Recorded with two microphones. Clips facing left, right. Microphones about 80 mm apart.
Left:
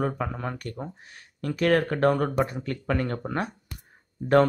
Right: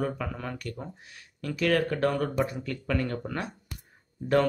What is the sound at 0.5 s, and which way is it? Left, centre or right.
Speech, left.